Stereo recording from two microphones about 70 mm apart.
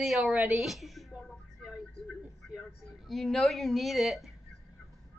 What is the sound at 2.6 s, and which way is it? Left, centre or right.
A woman's voice, centre.